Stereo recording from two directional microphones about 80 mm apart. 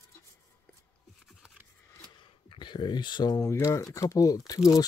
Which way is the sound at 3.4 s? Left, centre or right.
Left.